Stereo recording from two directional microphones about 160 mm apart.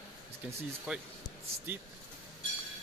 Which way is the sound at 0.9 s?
5° right (ahead or behind).